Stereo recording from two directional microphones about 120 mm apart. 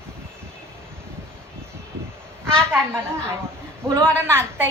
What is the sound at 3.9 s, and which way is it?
Speech, 20° right (ahead or behind).